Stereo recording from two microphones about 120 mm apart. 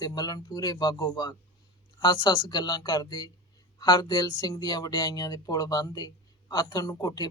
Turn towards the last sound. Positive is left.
turn(degrees=30)  # may be behind; listen again after turning